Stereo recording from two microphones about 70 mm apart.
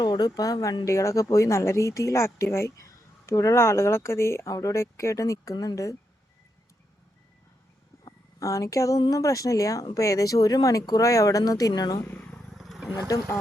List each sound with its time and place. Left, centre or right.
0.0 s speech: left
8.4 s speech: left
12.1 s vehicle: centre
12.5 s vehicle: centre